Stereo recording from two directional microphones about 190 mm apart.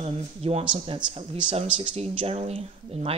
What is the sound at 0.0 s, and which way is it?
Speech, 30° right (ahead or behind).